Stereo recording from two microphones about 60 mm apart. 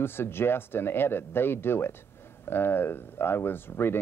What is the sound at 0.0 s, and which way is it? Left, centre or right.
Speech, left.